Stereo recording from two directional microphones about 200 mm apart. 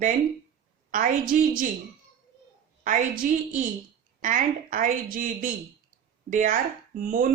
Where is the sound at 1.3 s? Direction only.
40° right (ahead or behind).